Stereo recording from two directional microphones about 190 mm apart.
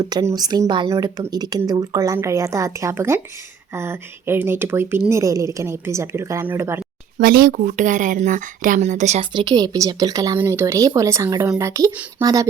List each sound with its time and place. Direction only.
0.0 s speech: 20° right (ahead or behind)
7.2 s speech: 50° right (ahead or behind)
9.3 s speech: 20° right (ahead or behind)